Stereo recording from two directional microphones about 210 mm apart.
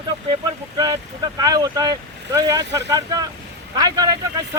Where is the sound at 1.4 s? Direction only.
20° right (ahead or behind).